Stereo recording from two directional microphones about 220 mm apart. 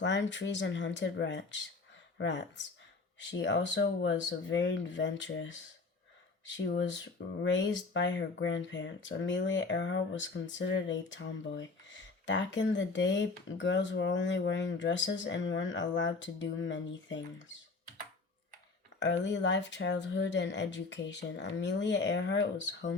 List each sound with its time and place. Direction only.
0.0 s speech: 55° left (ahead or behind)
18.9 s speech: 55° left (ahead or behind)